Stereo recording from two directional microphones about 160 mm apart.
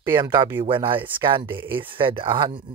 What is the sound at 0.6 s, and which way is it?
Speech, 30° right (ahead or behind).